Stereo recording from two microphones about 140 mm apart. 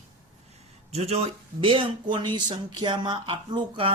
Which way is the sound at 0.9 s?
50° right (ahead or behind).